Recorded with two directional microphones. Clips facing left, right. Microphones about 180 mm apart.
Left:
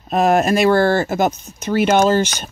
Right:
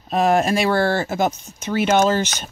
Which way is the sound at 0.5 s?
45° left (ahead or behind).